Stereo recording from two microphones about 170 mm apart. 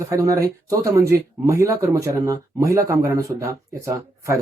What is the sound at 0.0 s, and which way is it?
Speech, 20° right (ahead or behind).